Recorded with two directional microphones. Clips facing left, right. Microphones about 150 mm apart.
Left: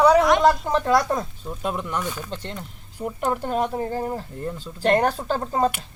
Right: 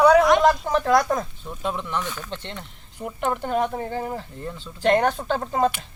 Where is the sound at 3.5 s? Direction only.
35° left (ahead or behind).